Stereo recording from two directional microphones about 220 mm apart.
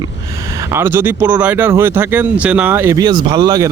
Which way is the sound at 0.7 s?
10° right (ahead or behind).